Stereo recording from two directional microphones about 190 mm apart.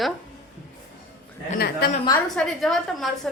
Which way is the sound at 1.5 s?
55° left (ahead or behind).